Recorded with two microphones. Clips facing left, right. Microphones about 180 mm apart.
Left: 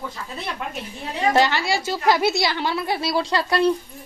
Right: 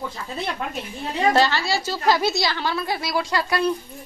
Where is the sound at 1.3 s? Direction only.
20° left (ahead or behind).